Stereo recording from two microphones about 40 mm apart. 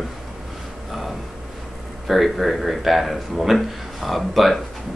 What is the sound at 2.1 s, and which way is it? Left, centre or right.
Speech, centre.